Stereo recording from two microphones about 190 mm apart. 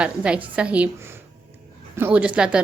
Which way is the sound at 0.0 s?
5° right (ahead or behind).